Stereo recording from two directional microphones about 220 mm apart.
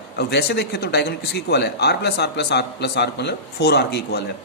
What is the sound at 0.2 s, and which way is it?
A man's voice, 50° left (ahead or behind).